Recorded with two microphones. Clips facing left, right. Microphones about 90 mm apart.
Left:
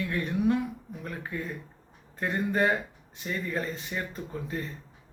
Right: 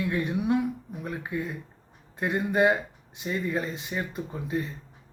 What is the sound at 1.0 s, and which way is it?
Speech, 15° right (ahead or behind).